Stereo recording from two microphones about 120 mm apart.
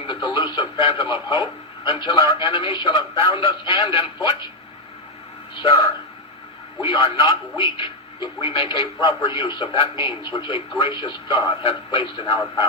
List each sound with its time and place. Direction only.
0.1 s speech: 40° left (ahead or behind)
5.6 s a man's voice: 50° left (ahead or behind)